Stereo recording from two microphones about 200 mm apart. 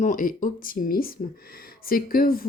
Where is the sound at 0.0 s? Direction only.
40° left (ahead or behind).